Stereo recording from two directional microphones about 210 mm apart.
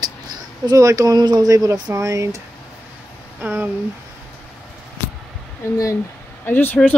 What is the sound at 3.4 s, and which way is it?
Speech, 10° right (ahead or behind).